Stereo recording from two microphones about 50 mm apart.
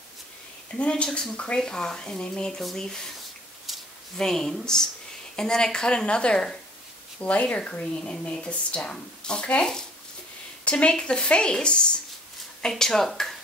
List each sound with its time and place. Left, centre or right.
0.7 s speech: left
4.2 s speech: centre
7.2 s speech: left; by 13.4 s centre